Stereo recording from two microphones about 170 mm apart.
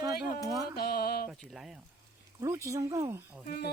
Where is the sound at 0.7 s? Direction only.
65° left (ahead or behind).